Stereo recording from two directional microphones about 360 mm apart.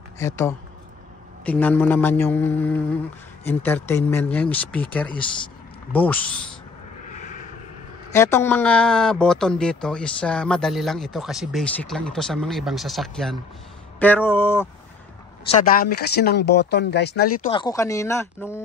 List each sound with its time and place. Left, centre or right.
0.2 s speech: centre
8.1 s speech: centre
15.5 s speech: left
17.5 s speech: centre